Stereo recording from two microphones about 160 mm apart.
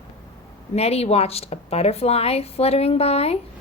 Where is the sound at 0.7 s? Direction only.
40° left (ahead or behind).